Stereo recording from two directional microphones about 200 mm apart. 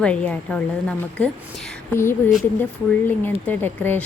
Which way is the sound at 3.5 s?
10° left (ahead or behind).